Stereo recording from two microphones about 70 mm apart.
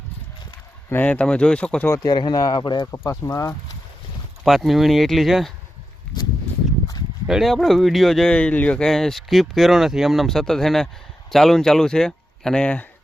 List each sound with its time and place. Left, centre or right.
1.0 s speech: centre
2.0 s speech: left
3.1 s speech: left
4.4 s speech: centre
7.3 s speech: centre
8.3 s speech: centre
8.8 s speech: centre